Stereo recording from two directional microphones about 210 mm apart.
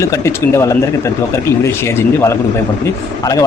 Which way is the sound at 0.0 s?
15° left (ahead or behind).